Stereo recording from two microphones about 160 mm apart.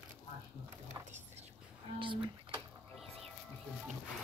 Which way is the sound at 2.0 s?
30° right (ahead or behind).